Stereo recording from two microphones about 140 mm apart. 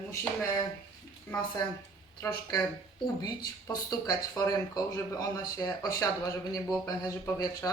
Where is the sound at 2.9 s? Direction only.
30° left (ahead or behind).